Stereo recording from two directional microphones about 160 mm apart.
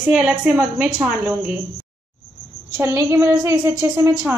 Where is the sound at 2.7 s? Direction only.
15° right (ahead or behind).